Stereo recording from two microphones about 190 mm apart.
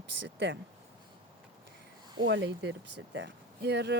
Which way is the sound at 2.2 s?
75° right (ahead or behind).